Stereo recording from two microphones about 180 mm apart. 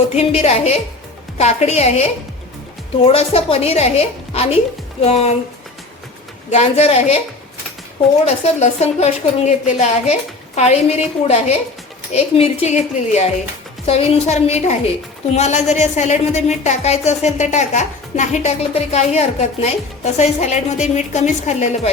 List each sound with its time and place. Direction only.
0.1 s speech: 35° left (ahead or behind)
6.5 s speech: 35° left (ahead or behind)
8.2 s speech: 35° left (ahead or behind)